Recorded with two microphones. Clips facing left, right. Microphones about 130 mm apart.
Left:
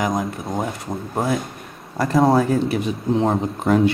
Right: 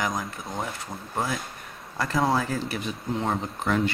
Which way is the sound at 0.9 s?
50° left (ahead or behind).